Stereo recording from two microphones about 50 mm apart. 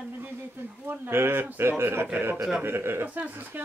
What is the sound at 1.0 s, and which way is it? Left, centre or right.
Chuckle, right.